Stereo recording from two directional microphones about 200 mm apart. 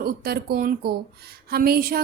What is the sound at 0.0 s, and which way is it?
Speech, 50° right (ahead or behind).